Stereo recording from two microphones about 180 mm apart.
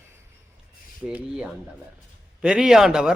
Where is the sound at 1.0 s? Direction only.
5° right (ahead or behind).